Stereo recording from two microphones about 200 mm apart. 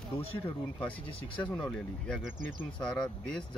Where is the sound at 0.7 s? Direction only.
5° left (ahead or behind).